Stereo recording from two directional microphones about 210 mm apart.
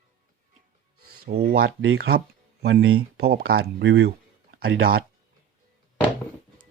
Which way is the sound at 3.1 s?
50° right (ahead or behind).